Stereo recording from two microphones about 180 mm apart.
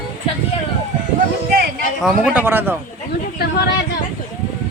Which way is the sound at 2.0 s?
10° right (ahead or behind).